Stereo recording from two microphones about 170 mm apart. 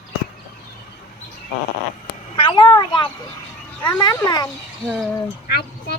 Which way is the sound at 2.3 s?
30° left (ahead or behind).